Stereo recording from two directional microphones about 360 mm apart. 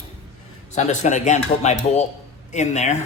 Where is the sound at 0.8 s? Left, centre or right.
Centre.